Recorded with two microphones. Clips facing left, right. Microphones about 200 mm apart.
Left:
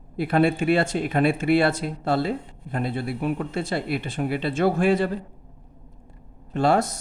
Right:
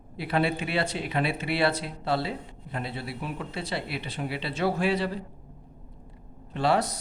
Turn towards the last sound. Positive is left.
turn(degrees=45)  # may be behind; listen again after turning